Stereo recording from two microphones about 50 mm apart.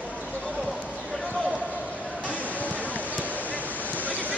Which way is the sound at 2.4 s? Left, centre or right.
Left.